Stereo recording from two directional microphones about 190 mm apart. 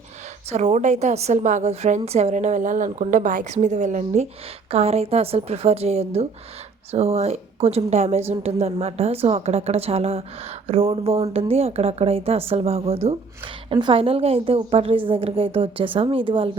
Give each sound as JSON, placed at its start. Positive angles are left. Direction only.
{"t": 0.5, "sound": "a woman's voice", "side_deg": -35}